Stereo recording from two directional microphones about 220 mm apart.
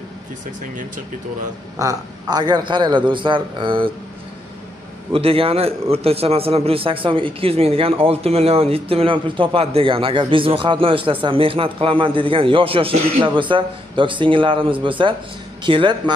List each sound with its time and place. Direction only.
1.8 s a man's voice: 15° right (ahead or behind)
5.1 s a man's voice: 25° right (ahead or behind)